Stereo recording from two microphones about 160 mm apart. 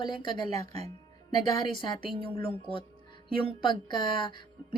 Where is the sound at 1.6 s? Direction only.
30° left (ahead or behind).